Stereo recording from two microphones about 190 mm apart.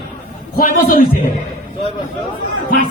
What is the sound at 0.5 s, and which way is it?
Speech, 50° left (ahead or behind).